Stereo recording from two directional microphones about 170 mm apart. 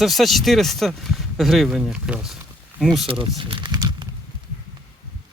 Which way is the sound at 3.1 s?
30° right (ahead or behind).